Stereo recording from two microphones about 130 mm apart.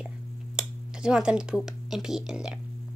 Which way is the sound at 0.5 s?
5° right (ahead or behind).